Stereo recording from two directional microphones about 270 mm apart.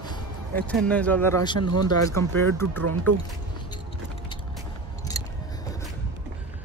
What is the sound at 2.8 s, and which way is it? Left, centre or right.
Speech, right.